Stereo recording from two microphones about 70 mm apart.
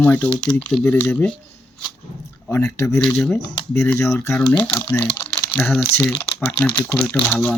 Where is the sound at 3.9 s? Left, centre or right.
Left.